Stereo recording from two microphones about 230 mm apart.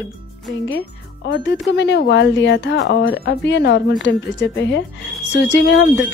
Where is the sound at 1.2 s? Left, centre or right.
Left.